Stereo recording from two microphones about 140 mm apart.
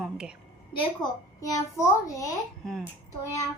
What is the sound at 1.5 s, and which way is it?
Speech, 25° left (ahead or behind).